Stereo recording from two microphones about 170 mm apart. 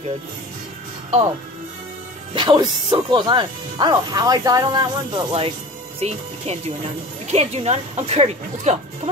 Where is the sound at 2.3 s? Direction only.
30° right (ahead or behind).